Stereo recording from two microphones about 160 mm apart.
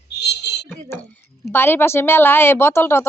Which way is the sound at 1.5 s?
15° left (ahead or behind).